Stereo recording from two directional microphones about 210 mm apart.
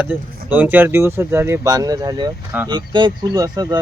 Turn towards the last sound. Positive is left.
turn(degrees=-20)  # may be behind; listen again after turning